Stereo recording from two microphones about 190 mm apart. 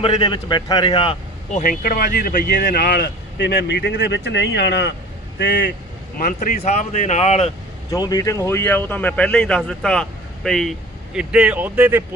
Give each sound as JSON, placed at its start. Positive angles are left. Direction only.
{"t": 0.0, "sound": "a man's voice", "side_deg": 25}
{"t": 1.5, "sound": "speech", "side_deg": 50}
{"t": 6.1, "sound": "speech", "side_deg": 45}
{"t": 7.9, "sound": "speech", "side_deg": 20}